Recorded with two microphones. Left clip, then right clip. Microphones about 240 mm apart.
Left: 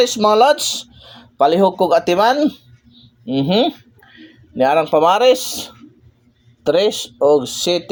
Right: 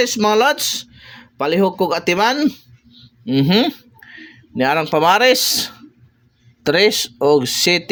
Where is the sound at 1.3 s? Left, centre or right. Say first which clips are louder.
Left 4 dB; right.